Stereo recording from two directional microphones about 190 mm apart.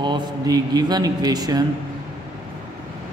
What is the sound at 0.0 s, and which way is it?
A man's voice, 20° right (ahead or behind).